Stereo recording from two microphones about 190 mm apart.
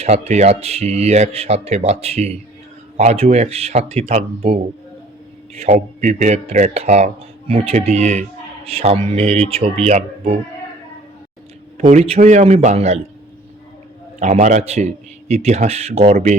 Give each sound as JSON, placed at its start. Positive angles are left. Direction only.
{"t": 0.0, "sound": "speech", "side_deg": -35}
{"t": 11.8, "sound": "speech", "side_deg": -35}
{"t": 14.2, "sound": "speech", "side_deg": -40}